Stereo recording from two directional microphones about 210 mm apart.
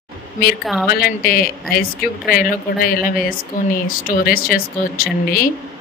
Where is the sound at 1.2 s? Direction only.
45° left (ahead or behind).